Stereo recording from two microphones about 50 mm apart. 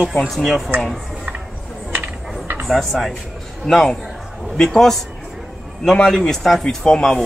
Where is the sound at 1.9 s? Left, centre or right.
Right.